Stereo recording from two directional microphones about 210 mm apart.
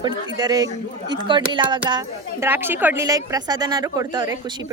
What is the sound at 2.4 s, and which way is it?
A woman's voice, 10° right (ahead or behind).